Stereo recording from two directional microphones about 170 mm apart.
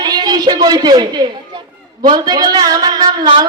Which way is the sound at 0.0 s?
25° right (ahead or behind).